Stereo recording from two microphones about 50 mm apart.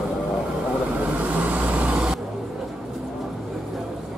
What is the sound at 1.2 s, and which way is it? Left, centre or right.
Vehicle, right.